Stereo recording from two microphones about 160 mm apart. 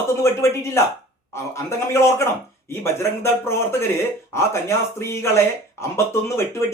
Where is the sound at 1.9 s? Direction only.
15° left (ahead or behind).